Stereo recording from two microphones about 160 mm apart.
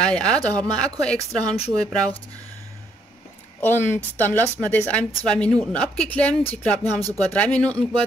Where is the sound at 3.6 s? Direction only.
15° left (ahead or behind).